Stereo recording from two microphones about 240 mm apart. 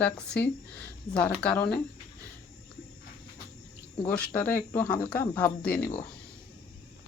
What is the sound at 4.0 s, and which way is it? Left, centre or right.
Speech, centre.